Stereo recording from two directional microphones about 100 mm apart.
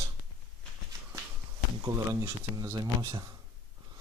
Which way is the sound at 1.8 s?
35° right (ahead or behind).